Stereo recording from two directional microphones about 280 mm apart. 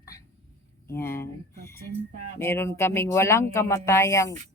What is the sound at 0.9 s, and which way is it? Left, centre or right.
Speech, centre.